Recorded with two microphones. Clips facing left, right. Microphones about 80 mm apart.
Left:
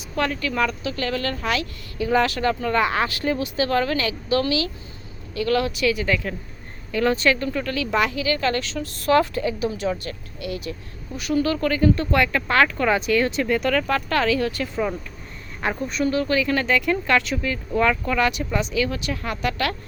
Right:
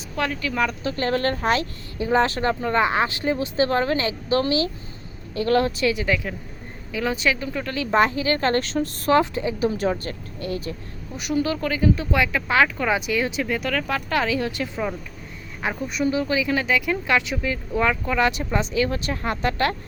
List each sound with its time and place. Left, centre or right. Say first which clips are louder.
0.2 s speech: left 1 dB; centre
0.8 s a woman's voice: right 3 dB; right
9.1 s a woman's voice: left 1 dB; right
9.6 s speech: right 2 dB; right
11.2 s speech: left 2 dB; centre
15.6 s speech: left 1 dB; centre
18.3 s speech: even; right